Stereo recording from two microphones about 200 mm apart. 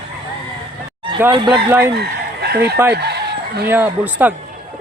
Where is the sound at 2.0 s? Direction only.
55° right (ahead or behind).